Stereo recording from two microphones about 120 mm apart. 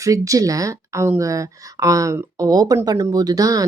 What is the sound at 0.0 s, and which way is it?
Speech, 30° right (ahead or behind).